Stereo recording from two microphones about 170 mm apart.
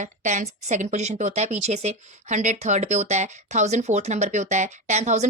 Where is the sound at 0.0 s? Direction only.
45° right (ahead or behind).